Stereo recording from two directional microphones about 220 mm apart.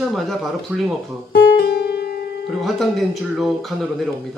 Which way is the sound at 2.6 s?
Centre (ahead or behind).